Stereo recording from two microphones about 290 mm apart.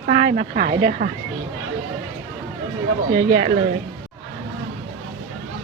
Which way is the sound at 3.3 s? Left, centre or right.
Right.